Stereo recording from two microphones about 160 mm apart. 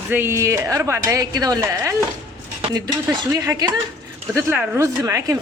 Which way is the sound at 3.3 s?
20° right (ahead or behind).